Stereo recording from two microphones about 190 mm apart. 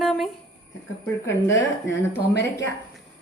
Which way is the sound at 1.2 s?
15° left (ahead or behind).